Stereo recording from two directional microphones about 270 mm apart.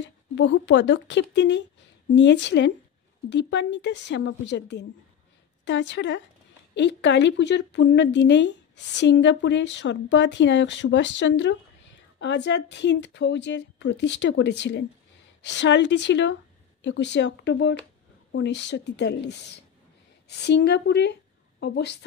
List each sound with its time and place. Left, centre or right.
0.4 s speech: left